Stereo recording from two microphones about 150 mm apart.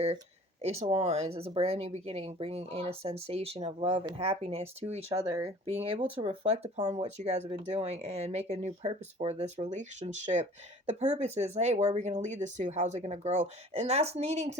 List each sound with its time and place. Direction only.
0.6 s speech: 45° right (ahead or behind)